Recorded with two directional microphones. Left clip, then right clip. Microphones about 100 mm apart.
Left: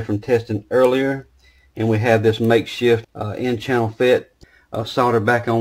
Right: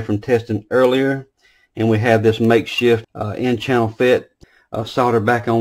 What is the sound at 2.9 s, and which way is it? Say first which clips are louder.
Speech: left 1 dB; 10° right (ahead or behind).